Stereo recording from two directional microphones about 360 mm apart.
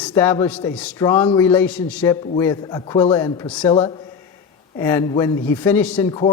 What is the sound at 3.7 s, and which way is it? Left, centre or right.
A man's voice, centre.